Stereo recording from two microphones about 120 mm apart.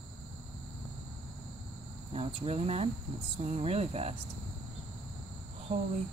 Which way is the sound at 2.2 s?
60° right (ahead or behind).